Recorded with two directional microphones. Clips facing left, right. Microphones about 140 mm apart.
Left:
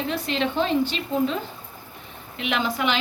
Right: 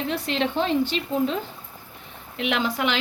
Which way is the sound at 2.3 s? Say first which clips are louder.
Right 1 dB; 75° right (ahead or behind).